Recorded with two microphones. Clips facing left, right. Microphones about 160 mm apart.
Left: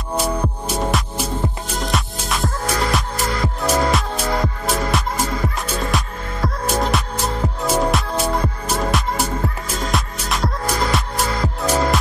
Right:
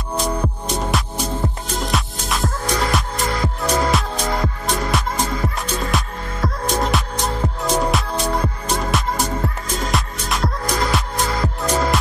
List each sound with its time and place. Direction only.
0.2 s music: 5° left (ahead or behind)